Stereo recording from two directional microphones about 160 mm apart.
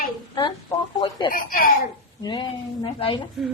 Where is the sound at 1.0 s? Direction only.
30° left (ahead or behind).